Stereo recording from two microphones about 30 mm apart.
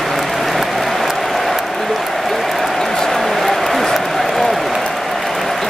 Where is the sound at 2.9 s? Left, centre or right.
Centre.